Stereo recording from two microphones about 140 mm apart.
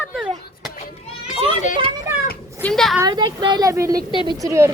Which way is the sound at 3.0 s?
35° right (ahead or behind).